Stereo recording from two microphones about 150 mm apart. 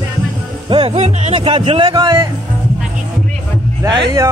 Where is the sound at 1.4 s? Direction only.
35° right (ahead or behind).